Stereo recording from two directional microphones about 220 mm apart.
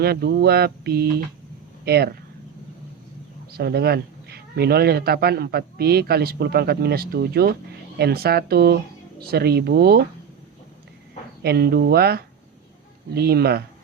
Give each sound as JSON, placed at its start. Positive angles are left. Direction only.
{"t": 0.0, "sound": "speech", "side_deg": -45}
{"t": 3.5, "sound": "speech", "side_deg": -45}
{"t": 11.4, "sound": "speech", "side_deg": -45}